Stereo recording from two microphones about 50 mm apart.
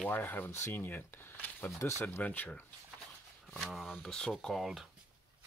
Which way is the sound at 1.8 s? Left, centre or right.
Left.